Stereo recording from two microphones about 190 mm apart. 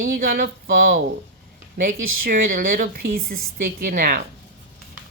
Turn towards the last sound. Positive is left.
turn(degrees=-50)  # may be behind; listen again after turning